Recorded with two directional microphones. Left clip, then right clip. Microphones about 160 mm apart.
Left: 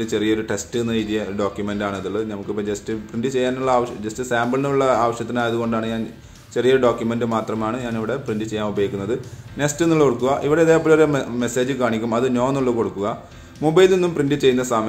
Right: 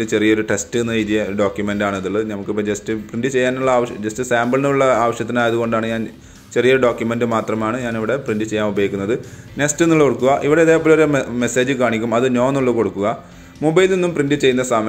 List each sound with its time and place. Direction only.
0.0 s a man's voice: 25° right (ahead or behind)